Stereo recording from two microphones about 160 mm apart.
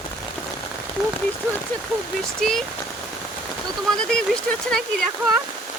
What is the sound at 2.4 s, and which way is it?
Speech, centre (ahead or behind).